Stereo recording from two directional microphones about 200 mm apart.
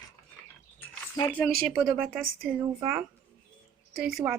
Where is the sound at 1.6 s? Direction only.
5° right (ahead or behind).